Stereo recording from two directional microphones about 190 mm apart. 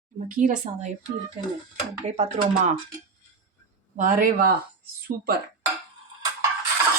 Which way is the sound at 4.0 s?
45° right (ahead or behind).